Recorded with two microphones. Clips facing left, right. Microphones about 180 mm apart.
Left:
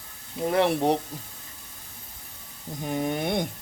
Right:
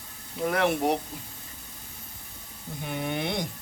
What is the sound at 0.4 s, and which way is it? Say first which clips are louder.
Speech: left 2 dB; 30° left (ahead or behind).